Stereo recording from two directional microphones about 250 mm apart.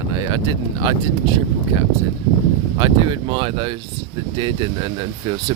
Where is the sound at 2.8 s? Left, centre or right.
Centre.